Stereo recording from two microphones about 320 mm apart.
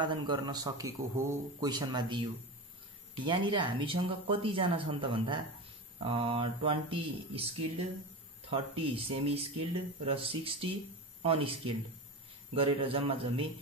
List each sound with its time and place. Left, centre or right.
0.0 s speech: centre
3.3 s speech: centre